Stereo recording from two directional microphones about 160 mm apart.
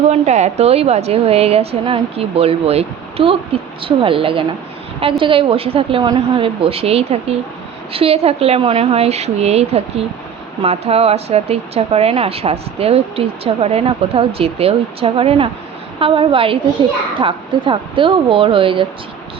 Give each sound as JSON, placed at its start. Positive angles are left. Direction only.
{"t": 0.1, "sound": "speech", "side_deg": -45}